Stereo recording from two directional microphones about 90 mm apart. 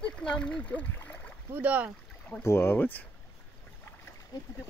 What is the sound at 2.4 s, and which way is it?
Speech, 30° left (ahead or behind).